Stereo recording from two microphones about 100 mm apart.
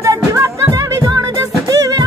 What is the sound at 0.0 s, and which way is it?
Music, 30° right (ahead or behind).